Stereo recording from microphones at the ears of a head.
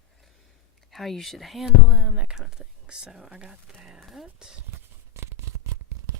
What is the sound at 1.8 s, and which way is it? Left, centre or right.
Speech, right.